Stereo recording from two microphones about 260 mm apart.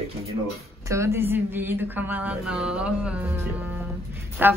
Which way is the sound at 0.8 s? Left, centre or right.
Centre.